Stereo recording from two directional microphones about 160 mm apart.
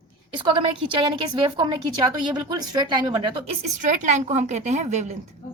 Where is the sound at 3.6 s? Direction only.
55° right (ahead or behind).